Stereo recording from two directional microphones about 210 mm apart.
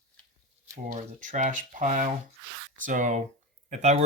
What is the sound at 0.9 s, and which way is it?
Speech, 35° right (ahead or behind).